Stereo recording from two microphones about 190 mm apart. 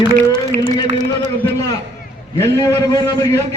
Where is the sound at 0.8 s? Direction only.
40° right (ahead or behind).